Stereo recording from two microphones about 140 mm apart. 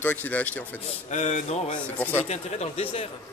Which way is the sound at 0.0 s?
10° left (ahead or behind).